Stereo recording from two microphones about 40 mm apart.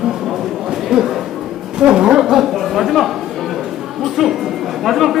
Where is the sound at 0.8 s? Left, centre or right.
Centre.